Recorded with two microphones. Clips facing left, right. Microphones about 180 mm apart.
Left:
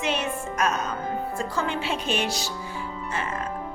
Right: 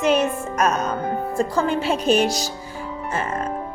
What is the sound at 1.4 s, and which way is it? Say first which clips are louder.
A woman's voice: right 11 dB; 40° right (ahead or behind).